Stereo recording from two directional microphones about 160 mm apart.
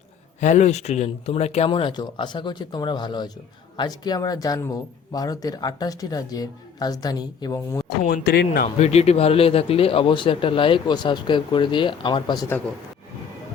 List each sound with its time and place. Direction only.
0.3 s speech: 50° left (ahead or behind); by 7.9 s 15° left (ahead or behind)
7.9 s speech: 75° left (ahead or behind)
8.6 s speech: 45° left (ahead or behind); by 12.5 s 25° left (ahead or behind)